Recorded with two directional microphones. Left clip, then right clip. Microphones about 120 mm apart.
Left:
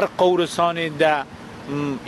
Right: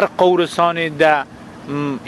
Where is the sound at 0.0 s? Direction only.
20° right (ahead or behind).